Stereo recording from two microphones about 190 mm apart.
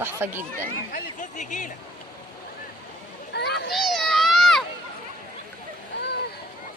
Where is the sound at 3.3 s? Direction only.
60° left (ahead or behind).